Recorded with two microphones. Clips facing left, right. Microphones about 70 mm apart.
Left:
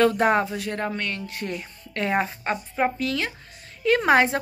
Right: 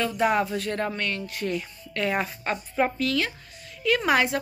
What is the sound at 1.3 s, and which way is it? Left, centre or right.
Speech, left.